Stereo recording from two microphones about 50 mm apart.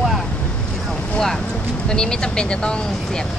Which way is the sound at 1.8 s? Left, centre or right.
Centre.